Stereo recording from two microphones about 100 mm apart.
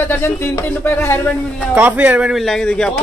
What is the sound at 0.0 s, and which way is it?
Speech, 25° left (ahead or behind).